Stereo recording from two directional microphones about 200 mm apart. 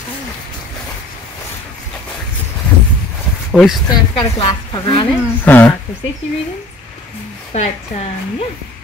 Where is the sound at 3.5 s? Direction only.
5° left (ahead or behind).